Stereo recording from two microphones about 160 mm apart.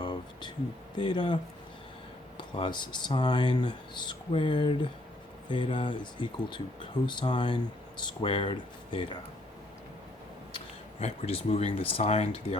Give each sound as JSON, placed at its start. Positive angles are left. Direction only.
{"t": 0.0, "sound": "a sound", "side_deg": 30}
{"t": 0.9, "sound": "speech", "side_deg": 30}
{"t": 2.4, "sound": "speech", "side_deg": 30}
{"t": 11.0, "sound": "speech", "side_deg": 40}